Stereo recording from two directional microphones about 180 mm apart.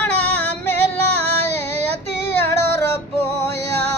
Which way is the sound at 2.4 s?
15° left (ahead or behind).